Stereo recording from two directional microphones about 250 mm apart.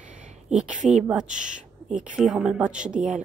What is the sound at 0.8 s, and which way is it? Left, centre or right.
Speech, right.